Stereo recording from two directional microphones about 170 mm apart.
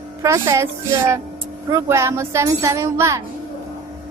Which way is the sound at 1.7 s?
15° right (ahead or behind).